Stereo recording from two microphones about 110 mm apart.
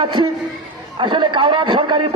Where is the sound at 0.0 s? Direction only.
45° right (ahead or behind).